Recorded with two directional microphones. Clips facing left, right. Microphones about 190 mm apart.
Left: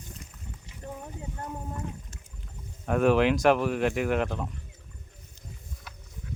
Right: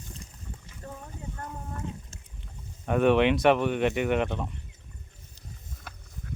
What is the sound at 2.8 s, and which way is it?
Speech, centre (ahead or behind).